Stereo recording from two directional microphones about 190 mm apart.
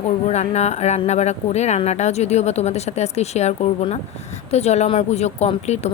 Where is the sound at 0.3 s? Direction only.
35° left (ahead or behind).